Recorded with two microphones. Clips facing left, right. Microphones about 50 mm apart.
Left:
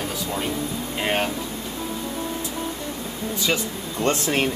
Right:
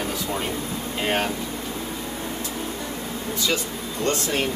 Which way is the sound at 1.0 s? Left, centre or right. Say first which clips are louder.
Even; centre.